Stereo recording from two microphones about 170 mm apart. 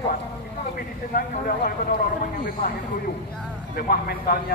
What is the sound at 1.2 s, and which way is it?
Speech, 55° left (ahead or behind).